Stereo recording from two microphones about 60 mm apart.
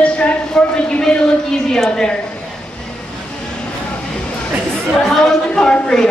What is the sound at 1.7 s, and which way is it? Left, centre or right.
Speech, centre.